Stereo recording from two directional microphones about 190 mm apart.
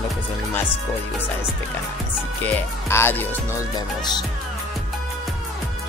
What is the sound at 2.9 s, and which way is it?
Speech, 10° left (ahead or behind).